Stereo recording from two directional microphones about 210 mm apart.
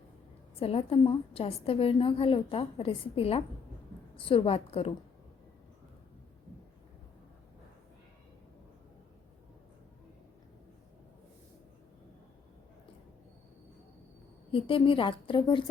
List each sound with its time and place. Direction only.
0.6 s a woman's voice: 25° left (ahead or behind)
14.5 s a woman's voice: 25° left (ahead or behind)